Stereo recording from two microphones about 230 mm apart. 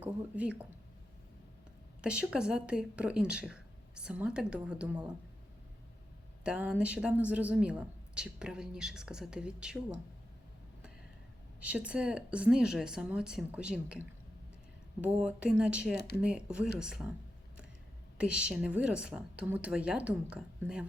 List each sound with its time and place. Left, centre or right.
0.0 s speech: centre
2.0 s a woman's voice: centre
6.4 s a woman's voice: centre
11.6 s a woman's voice: centre
16.0 s speech: left
16.2 s a woman's voice: centre
18.2 s a woman's voice: centre